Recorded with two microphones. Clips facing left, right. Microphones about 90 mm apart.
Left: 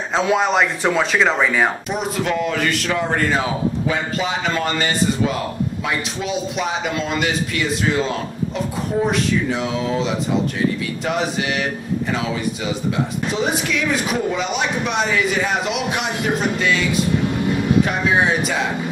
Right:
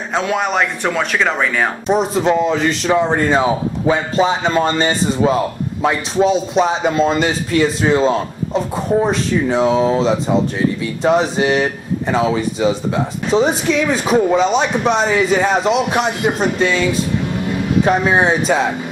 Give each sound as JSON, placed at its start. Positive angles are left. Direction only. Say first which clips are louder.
{"t": 0.1, "sound": "speech", "louder": "even", "side_deg": 0}
{"t": 1.9, "sound": "speech", "louder": "right 7 dB", "side_deg": -30}
{"t": 17.8, "sound": "speech", "louder": "right 4 dB", "side_deg": -35}